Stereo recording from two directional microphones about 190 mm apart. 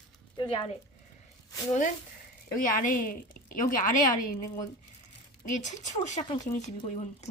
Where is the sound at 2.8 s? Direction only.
45° left (ahead or behind).